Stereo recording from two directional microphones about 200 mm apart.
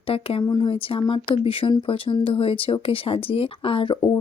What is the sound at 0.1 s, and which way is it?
Speech, 30° left (ahead or behind).